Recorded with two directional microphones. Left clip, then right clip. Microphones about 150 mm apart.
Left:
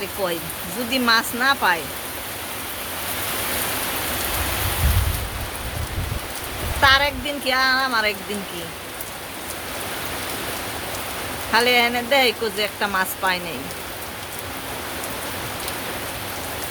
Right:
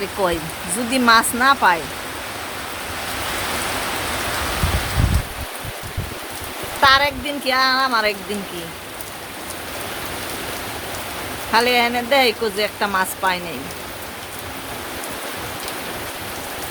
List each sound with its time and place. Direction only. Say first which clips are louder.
0.2 s speech: right 5 dB; 20° right (ahead or behind)
6.8 s speech: right 2 dB; 15° right (ahead or behind)
11.5 s speech: right 1 dB; 10° right (ahead or behind)